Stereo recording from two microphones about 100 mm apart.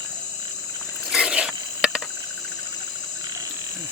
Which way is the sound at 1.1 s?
10° right (ahead or behind).